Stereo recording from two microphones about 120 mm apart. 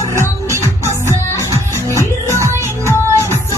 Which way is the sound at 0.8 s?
20° left (ahead or behind).